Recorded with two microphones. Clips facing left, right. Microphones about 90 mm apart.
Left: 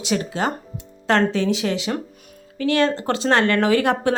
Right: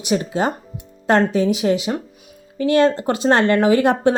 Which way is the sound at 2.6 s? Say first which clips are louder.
Right 4 dB; 20° right (ahead or behind).